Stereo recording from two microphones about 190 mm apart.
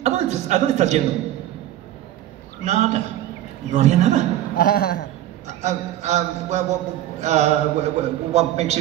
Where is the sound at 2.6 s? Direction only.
35° right (ahead or behind).